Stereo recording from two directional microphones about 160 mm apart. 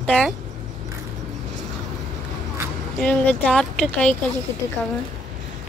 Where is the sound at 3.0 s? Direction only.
5° left (ahead or behind).